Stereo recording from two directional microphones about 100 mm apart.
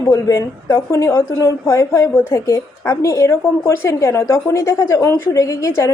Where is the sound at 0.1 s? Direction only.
30° left (ahead or behind).